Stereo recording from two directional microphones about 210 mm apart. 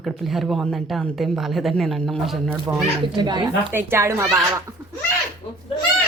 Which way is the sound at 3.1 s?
20° right (ahead or behind).